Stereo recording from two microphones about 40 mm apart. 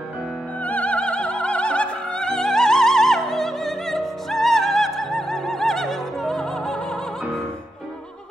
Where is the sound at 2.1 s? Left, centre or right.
Centre.